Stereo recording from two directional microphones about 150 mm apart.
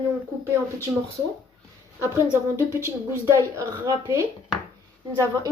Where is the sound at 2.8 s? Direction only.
20° right (ahead or behind).